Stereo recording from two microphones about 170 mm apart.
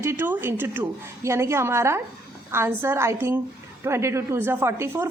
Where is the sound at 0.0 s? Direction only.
15° right (ahead or behind).